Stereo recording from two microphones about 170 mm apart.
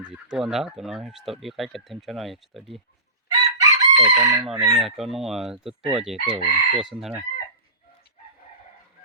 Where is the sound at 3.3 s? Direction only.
20° right (ahead or behind).